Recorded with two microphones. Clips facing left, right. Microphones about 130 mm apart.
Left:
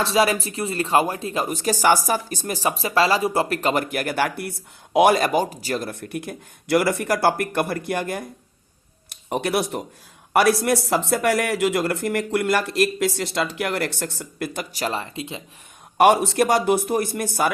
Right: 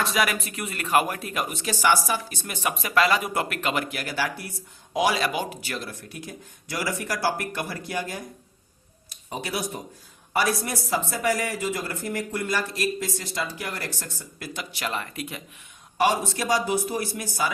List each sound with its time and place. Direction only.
0.0 s speech: 30° left (ahead or behind)
1.5 s speech: 40° left (ahead or behind)
5.9 s speech: 60° left (ahead or behind); by 15.4 s 25° left (ahead or behind)
16.0 s speech: 65° left (ahead or behind)